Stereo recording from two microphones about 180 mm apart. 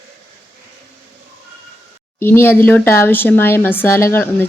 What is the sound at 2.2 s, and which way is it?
A woman's voice, 15° left (ahead or behind).